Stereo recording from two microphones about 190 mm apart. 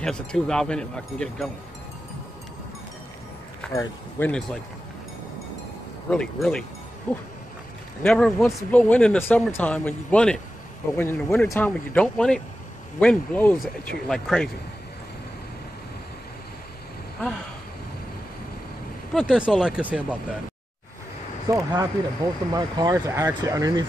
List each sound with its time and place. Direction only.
0.0 s speech: 5° left (ahead or behind)
3.7 s speech: 10° left (ahead or behind)
6.0 s speech: 5° left (ahead or behind)
19.1 s speech: 5° right (ahead or behind)
21.5 s speech: 15° right (ahead or behind)